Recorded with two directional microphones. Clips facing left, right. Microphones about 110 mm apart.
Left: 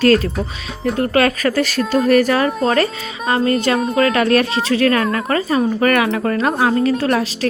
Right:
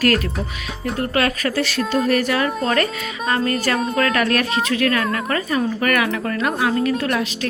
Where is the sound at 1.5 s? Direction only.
45° left (ahead or behind).